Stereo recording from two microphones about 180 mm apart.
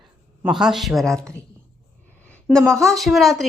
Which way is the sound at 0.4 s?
Centre (ahead or behind).